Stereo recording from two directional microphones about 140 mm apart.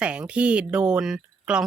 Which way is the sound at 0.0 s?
5° right (ahead or behind).